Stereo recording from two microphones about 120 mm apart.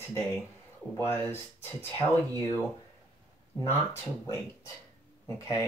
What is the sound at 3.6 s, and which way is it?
Speech, 20° left (ahead or behind).